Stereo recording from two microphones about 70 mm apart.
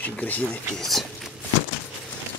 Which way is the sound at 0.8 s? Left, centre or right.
Centre.